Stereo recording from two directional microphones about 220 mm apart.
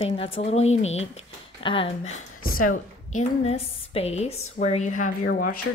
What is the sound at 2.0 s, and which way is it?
Speech, 65° left (ahead or behind).